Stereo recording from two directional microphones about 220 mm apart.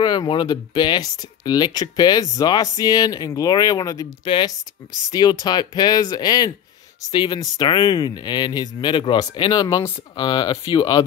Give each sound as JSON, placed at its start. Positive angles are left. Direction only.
{"t": 0.0, "sound": "speech", "side_deg": 20}